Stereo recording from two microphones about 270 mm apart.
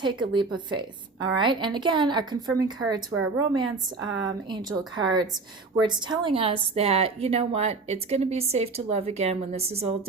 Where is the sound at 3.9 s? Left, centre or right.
Right.